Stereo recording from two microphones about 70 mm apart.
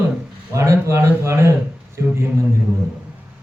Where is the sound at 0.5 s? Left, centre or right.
Right.